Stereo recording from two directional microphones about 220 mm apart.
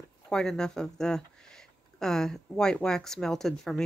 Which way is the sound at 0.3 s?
5° left (ahead or behind).